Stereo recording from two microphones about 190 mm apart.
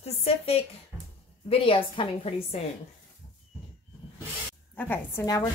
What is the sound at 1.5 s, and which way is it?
Speech, 30° left (ahead or behind).